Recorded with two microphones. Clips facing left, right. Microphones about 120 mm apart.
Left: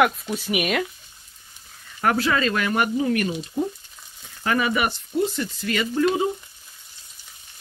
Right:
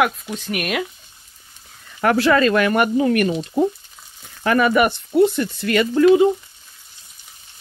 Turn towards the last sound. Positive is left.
turn(degrees=-65)  # may be behind; listen again after turning